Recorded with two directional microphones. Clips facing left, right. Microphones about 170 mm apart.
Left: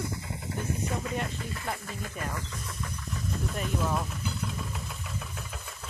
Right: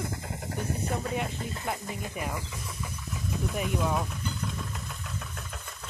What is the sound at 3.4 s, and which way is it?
Speech, 5° right (ahead or behind).